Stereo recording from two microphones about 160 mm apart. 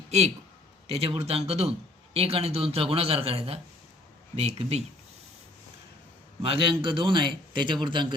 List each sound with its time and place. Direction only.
0.9 s a man's voice: 35° right (ahead or behind)
6.4 s a man's voice: 35° right (ahead or behind)